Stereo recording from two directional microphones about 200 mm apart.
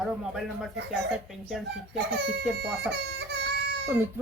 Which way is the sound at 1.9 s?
60° right (ahead or behind).